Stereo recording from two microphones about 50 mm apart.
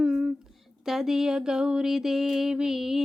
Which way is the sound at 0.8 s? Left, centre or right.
Centre.